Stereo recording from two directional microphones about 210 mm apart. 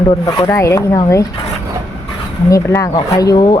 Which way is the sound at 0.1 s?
15° left (ahead or behind).